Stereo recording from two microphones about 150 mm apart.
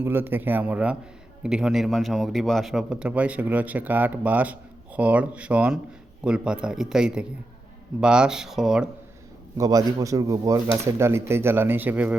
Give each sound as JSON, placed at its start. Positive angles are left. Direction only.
{"t": 0.0, "sound": "a man's voice", "side_deg": -15}
{"t": 9.6, "sound": "speech", "side_deg": -25}